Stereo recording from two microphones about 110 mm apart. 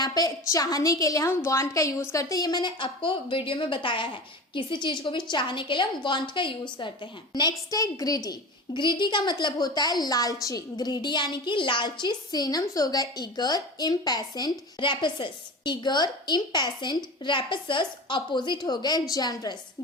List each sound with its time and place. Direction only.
0.0 s a woman's voice: 35° left (ahead or behind)